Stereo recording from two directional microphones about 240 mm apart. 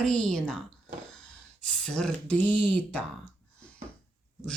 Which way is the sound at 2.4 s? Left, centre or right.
Centre.